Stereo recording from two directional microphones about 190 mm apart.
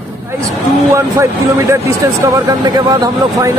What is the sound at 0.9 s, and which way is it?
Speech, 15° right (ahead or behind).